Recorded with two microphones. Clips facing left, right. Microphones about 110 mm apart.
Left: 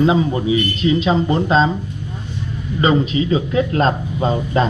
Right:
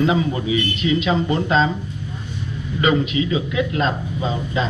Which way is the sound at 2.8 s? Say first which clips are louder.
Left 2 dB; 35° left (ahead or behind).